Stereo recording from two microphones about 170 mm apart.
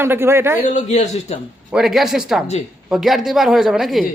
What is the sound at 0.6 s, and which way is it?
Speech, 40° left (ahead or behind).